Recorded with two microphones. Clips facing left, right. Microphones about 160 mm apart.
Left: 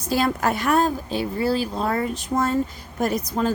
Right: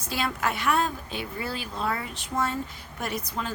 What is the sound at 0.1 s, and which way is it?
A woman's voice, 40° left (ahead or behind).